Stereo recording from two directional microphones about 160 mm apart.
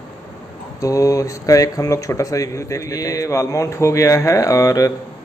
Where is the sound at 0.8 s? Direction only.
20° left (ahead or behind).